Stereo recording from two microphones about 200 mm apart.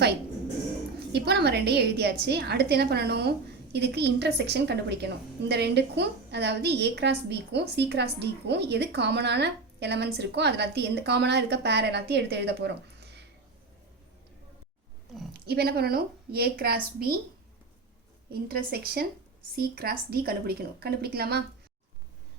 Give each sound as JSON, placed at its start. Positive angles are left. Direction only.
{"t": 1.1, "sound": "a woman's voice", "side_deg": -55}
{"t": 15.3, "sound": "a woman's voice", "side_deg": -55}
{"t": 18.3, "sound": "a woman's voice", "side_deg": -50}